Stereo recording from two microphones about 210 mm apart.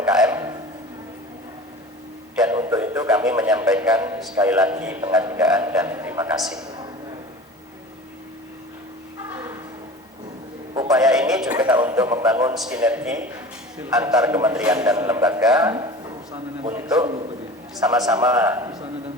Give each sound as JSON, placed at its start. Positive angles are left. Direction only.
{"t": 0.0, "sound": "music", "side_deg": -5}
{"t": 2.4, "sound": "a sound", "side_deg": -10}
{"t": 3.1, "sound": "a man's voice", "side_deg": -5}
{"t": 10.9, "sound": "a sound", "side_deg": -5}
{"t": 12.5, "sound": "a man's voice", "side_deg": -5}
{"t": 15.7, "sound": "a man's voice", "side_deg": -20}